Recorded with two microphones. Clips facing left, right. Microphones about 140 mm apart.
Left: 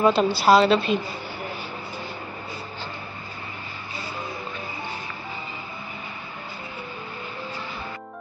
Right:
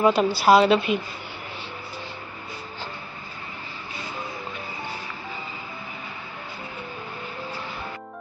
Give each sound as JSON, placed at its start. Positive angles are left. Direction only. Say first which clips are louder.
{"t": 0.0, "sound": "a woman's voice", "louder": "even", "side_deg": -15}